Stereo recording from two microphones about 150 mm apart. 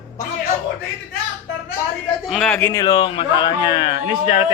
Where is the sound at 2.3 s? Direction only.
5° left (ahead or behind); by 4.4 s 40° left (ahead or behind).